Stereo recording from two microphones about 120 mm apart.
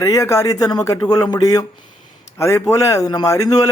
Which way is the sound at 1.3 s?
30° left (ahead or behind).